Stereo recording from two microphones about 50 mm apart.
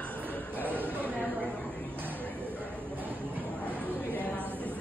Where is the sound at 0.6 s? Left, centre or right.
Right.